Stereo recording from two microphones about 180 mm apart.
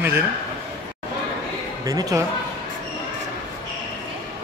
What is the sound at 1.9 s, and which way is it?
Speech, 20° right (ahead or behind).